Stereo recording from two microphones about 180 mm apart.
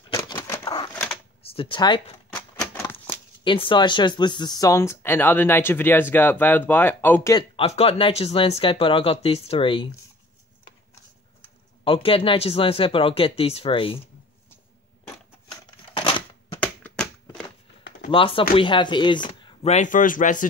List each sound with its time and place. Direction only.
0.1 s a sound: 20° left (ahead or behind)
1.4 s speech: 30° left (ahead or behind)
2.3 s shuffling cards: 10° left (ahead or behind)
3.4 s speech: 30° left (ahead or behind); by 7.3 s 10° left (ahead or behind)
7.3 s speech: 30° left (ahead or behind)
11.8 s speech: 30° left (ahead or behind)
15.5 s a sound: 30° left (ahead or behind)
16.5 s a sound: 10° left (ahead or behind)
18.1 s speech: 30° left (ahead or behind)
19.6 s a man's voice: 40° left (ahead or behind)